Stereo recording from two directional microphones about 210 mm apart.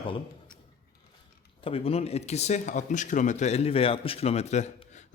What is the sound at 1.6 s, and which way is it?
Speech, 25° left (ahead or behind).